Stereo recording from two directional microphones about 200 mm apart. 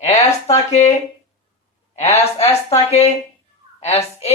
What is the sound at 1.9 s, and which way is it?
A man's voice, 35° left (ahead or behind).